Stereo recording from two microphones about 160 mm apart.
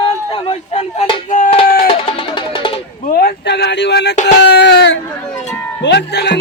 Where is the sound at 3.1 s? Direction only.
85° left.